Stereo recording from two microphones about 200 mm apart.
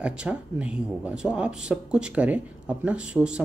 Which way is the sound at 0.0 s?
5° right (ahead or behind).